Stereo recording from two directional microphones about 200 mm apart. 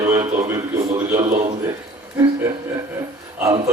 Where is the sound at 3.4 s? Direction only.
15° right (ahead or behind).